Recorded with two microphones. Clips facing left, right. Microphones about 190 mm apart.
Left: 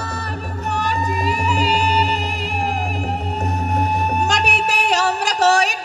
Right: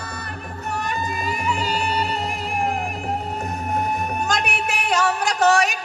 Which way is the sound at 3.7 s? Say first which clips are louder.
Left 2 dB; 70° left (ahead or behind).